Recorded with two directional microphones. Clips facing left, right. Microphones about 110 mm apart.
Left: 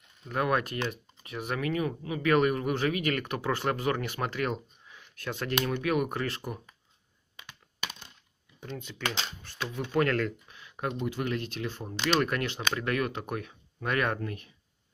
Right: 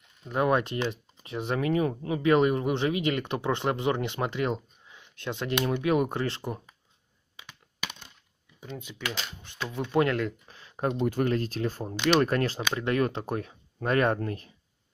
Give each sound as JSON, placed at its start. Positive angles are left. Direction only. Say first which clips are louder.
{"t": 0.3, "sound": "speech", "louder": "right 3 dB", "side_deg": -25}
{"t": 8.5, "sound": "speech", "louder": "even", "side_deg": -10}
{"t": 10.5, "sound": "computer keyboard", "louder": "right 5 dB", "side_deg": -35}
{"t": 11.1, "sound": "speech", "louder": "right 5 dB", "side_deg": -40}